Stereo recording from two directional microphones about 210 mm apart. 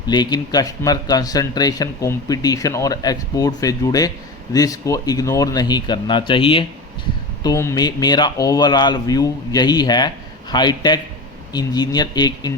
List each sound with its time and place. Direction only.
0.1 s speech: 20° left (ahead or behind)
7.4 s speech: 15° left (ahead or behind)